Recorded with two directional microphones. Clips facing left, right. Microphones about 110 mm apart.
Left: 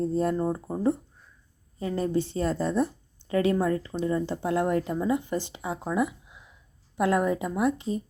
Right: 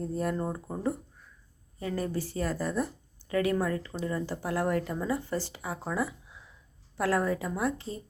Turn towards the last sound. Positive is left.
turn(degrees=20)  # may be behind; listen again after turning